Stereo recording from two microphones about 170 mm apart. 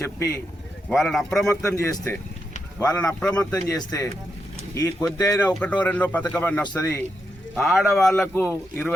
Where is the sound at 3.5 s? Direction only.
20° left (ahead or behind).